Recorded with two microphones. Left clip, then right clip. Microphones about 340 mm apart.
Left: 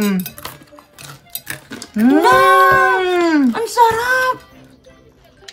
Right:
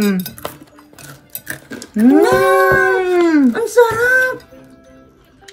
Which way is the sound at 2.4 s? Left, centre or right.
Left.